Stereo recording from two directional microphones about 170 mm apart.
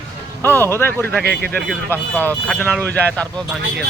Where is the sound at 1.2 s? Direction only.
65° right (ahead or behind).